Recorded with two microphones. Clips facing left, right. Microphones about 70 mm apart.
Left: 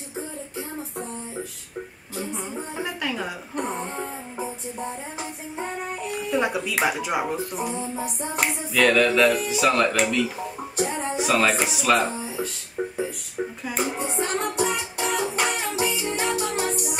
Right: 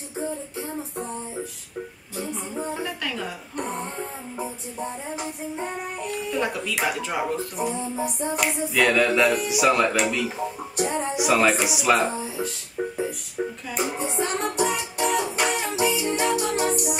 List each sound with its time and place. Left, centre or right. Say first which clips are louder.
2.8 s music: left 1 dB; centre
6.3 s speech: left 4 dB; centre
8.7 s speech: left 2 dB; centre
10.8 s music: right 1 dB; centre
11.7 s speech: even; centre
12.8 s music: even; centre